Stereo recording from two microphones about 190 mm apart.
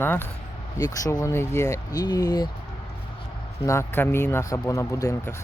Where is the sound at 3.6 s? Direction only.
15° left (ahead or behind).